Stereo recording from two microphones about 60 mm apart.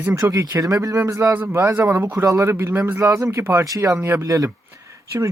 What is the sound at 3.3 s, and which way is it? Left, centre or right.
Speech, right.